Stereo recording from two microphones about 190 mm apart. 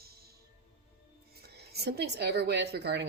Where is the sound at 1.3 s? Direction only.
55° right (ahead or behind).